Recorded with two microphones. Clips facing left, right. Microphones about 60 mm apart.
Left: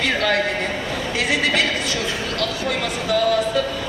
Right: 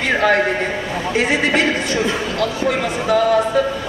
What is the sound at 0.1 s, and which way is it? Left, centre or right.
A man's voice, right.